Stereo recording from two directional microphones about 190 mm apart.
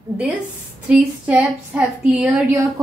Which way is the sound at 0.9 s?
5° right (ahead or behind).